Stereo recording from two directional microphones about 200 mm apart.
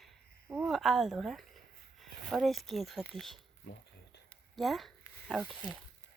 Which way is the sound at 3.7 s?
50° left (ahead or behind).